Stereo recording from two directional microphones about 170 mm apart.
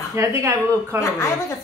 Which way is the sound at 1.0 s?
15° left (ahead or behind).